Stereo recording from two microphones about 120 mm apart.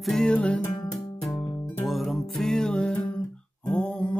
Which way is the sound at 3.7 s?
10° left (ahead or behind).